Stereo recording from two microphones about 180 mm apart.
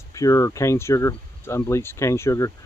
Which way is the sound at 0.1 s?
20° left (ahead or behind).